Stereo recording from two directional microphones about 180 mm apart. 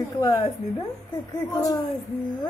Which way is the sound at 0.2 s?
20° left (ahead or behind).